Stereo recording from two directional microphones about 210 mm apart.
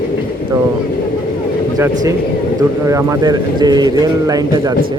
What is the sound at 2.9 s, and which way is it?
A man's voice, 15° right (ahead or behind).